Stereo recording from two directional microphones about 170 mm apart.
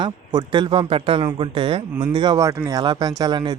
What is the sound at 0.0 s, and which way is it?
Speech, 25° right (ahead or behind).